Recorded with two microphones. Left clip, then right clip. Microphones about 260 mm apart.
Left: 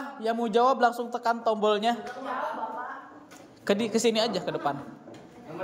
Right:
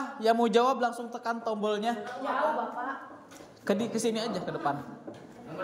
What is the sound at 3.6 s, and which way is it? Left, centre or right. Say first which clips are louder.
A woman's voice: left 4 dB; centre.